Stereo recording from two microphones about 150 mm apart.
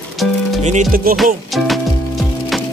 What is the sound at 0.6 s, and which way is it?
Music, 55° right (ahead or behind).